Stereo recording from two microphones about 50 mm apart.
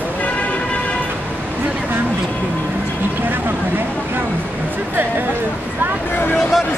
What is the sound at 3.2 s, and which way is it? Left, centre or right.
Vehicle, right.